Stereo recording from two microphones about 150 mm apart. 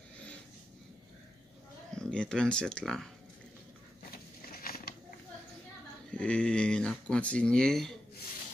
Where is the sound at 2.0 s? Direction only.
5° left (ahead or behind).